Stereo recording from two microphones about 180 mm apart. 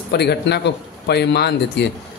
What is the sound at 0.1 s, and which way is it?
A man's voice, 65° left (ahead or behind).